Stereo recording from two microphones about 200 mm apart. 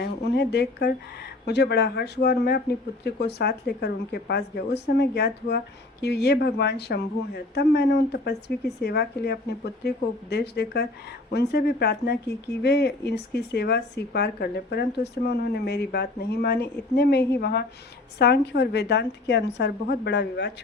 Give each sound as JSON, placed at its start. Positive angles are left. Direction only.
{"t": 0.0, "sound": "speech", "side_deg": 55}